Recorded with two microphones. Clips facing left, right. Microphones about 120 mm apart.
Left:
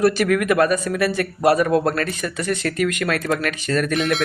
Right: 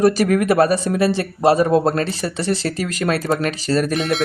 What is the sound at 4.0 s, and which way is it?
Speech, centre (ahead or behind).